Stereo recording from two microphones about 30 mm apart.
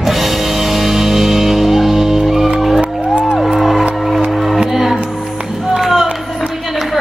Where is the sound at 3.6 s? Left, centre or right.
Centre.